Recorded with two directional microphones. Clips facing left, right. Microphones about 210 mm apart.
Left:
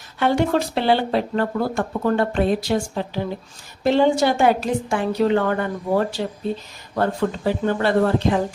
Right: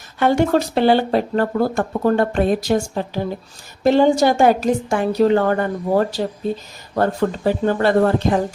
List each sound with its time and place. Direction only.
0.2 s speech: 45° right (ahead or behind)
3.8 s a woman's voice: 45° right (ahead or behind)